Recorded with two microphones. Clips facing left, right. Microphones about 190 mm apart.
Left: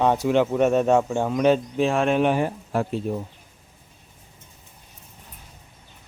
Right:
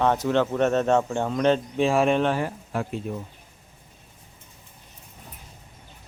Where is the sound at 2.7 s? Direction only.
35° left (ahead or behind).